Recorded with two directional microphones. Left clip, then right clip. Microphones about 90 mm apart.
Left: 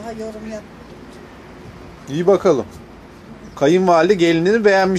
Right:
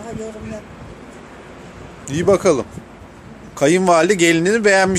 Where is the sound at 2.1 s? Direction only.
20° right (ahead or behind).